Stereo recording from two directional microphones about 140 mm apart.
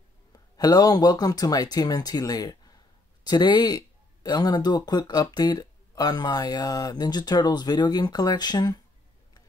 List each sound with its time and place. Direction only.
0.3 s speech: 25° left (ahead or behind)